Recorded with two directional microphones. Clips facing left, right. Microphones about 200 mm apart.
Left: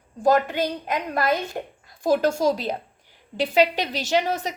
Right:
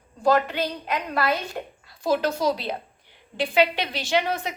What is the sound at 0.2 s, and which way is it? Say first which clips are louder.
Speech: left 1 dB; 45° left (ahead or behind).